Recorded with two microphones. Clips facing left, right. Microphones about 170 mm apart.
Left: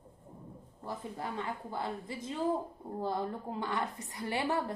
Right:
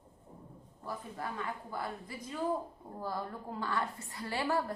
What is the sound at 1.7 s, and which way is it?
A woman's voice, 25° left (ahead or behind).